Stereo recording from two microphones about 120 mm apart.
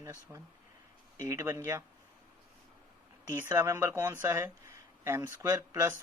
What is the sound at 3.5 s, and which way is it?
Speech, 20° right (ahead or behind).